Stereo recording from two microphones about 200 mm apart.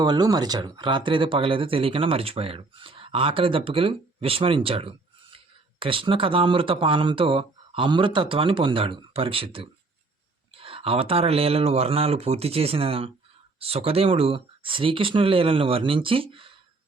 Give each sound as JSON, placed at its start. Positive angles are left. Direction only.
{"t": 0.0, "sound": "speech", "side_deg": -20}